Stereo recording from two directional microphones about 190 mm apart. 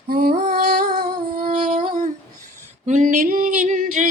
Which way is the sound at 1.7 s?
40° right (ahead or behind).